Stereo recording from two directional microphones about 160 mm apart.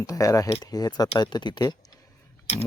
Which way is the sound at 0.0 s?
20° left (ahead or behind).